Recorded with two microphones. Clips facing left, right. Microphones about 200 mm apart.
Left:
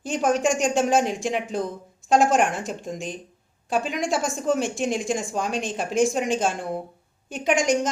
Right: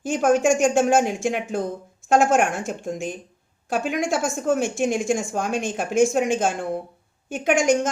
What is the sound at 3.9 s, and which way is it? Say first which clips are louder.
Speech: right 2 dB; centre (ahead or behind).